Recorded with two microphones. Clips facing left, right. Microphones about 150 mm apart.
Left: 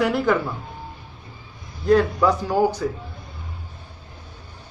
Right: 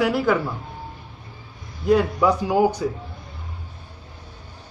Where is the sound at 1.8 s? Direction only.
10° right (ahead or behind).